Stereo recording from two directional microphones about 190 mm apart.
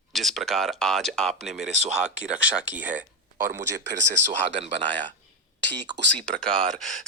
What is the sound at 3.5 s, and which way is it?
Speech, 65° right (ahead or behind).